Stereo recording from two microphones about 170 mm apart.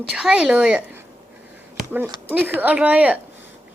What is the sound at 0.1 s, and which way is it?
Speech, 5° right (ahead or behind).